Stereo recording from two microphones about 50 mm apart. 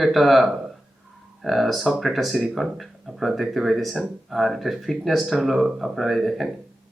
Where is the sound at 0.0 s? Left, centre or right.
Centre.